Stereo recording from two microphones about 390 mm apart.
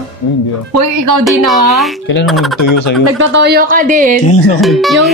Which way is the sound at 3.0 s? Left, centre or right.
Right.